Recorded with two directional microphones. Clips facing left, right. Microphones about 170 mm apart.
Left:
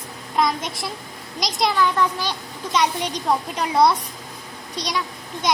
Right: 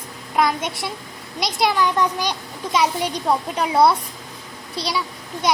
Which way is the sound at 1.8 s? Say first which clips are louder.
Right 1 dB; 15° right (ahead or behind).